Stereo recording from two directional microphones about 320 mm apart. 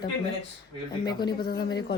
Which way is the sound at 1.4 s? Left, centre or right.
Left.